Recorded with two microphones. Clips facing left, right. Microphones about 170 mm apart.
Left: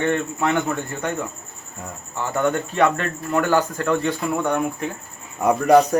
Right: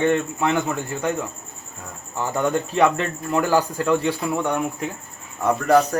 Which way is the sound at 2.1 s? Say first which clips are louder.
Even; 10° right (ahead or behind).